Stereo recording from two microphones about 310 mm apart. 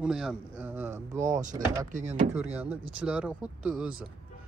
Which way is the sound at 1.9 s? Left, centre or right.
Right.